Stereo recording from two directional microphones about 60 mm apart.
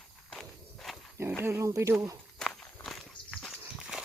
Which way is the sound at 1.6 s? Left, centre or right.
Right.